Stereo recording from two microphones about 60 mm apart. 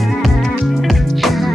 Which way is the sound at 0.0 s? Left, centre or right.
Centre.